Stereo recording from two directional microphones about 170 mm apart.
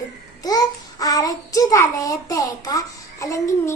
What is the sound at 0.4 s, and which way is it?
A child's voice, 20° left (ahead or behind).